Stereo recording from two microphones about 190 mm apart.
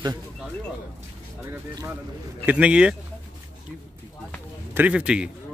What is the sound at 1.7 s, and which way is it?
Speech, 20° right (ahead or behind).